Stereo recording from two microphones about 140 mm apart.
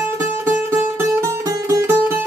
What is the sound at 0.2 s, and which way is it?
Music, 20° right (ahead or behind).